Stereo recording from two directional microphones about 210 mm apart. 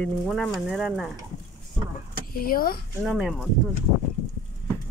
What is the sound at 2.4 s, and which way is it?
Speech, 45° left (ahead or behind).